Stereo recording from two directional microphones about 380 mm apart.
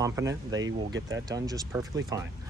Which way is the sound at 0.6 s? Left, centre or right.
Right.